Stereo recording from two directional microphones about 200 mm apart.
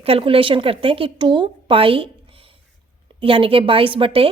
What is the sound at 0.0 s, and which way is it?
A woman's voice, 30° right (ahead or behind).